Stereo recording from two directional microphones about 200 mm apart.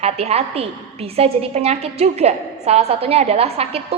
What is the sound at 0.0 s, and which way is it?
A woman's voice, 30° right (ahead or behind).